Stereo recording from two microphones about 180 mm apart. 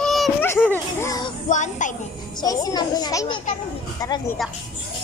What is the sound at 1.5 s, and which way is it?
Speech, 45° left (ahead or behind).